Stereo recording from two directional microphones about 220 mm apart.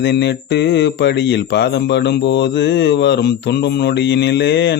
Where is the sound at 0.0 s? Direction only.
50° left (ahead or behind).